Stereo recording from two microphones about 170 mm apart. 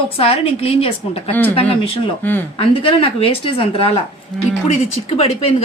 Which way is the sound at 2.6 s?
35° left (ahead or behind).